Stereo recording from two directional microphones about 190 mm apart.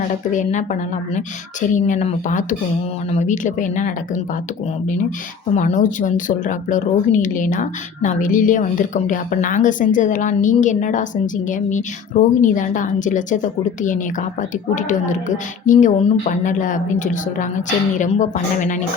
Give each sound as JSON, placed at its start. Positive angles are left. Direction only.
{"t": 0.3, "sound": "speech", "side_deg": 40}
{"t": 5.5, "sound": "speech", "side_deg": 40}